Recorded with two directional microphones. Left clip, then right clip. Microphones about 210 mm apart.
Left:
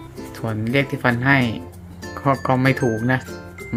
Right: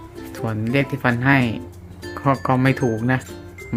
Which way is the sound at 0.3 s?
Centre (ahead or behind).